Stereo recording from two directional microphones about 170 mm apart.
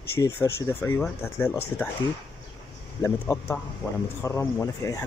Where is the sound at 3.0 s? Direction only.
15° left (ahead or behind).